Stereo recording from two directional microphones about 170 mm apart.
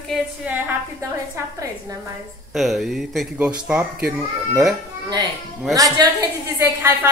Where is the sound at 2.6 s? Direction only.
Centre (ahead or behind).